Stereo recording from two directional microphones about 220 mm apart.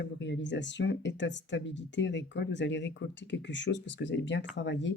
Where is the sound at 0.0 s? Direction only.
55° left (ahead or behind).